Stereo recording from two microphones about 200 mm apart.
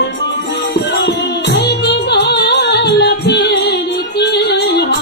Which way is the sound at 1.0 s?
60° left (ahead or behind).